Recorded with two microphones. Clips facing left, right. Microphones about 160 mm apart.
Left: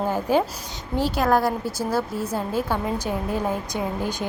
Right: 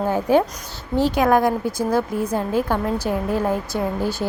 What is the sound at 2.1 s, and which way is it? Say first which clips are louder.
Speech: right 4 dB; 15° right (ahead or behind).